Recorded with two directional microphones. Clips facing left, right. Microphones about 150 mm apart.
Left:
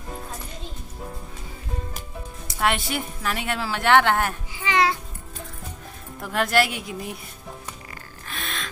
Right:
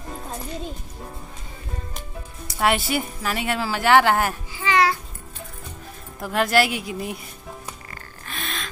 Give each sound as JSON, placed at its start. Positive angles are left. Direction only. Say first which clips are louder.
{"t": 2.6, "sound": "a woman's voice", "louder": "right 3 dB", "side_deg": -5}
{"t": 4.6, "sound": "music", "louder": "right 2 dB", "side_deg": 20}
{"t": 6.2, "sound": "a woman's voice", "louder": "right 2 dB", "side_deg": 0}
{"t": 8.3, "sound": "gasp", "louder": "right 1 dB", "side_deg": 0}